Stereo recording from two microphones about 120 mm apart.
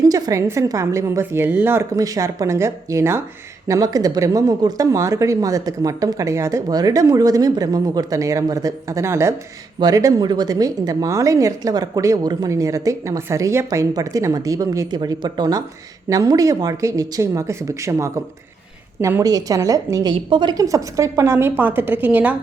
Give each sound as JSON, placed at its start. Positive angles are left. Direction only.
{"t": 0.0, "sound": "a woman's voice", "side_deg": -30}
{"t": 3.7, "sound": "a woman's voice", "side_deg": -30}
{"t": 20.1, "sound": "a woman's voice", "side_deg": -40}